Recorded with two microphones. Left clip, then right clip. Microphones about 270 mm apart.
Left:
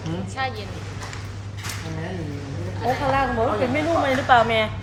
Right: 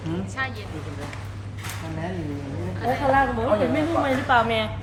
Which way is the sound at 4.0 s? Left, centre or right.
Centre.